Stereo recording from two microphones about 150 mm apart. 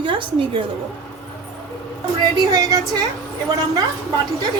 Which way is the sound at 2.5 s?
25° right (ahead or behind).